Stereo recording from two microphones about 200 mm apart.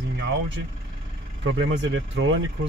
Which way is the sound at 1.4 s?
70° right (ahead or behind).